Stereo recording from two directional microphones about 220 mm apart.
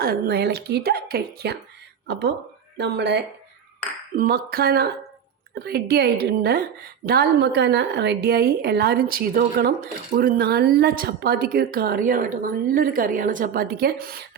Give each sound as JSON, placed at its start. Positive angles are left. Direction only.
{"t": 0.0, "sound": "a woman's voice", "side_deg": -45}